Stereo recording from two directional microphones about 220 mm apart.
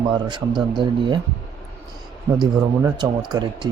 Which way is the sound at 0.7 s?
20° right (ahead or behind).